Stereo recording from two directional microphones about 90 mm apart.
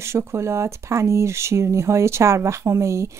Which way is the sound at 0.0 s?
30° right (ahead or behind).